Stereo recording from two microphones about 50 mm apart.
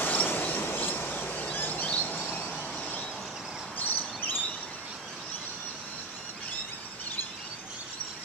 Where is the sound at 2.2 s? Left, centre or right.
Left.